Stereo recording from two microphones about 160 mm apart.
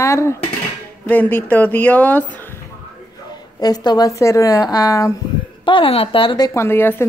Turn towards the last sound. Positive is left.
turn(degrees=15)  # may be behind; listen again after turning